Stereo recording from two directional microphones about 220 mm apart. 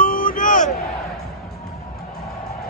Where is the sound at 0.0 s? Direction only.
40° left (ahead or behind).